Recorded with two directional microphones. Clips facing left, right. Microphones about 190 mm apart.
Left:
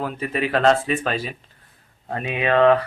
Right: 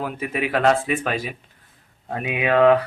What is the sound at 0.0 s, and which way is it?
Speech, 10° right (ahead or behind).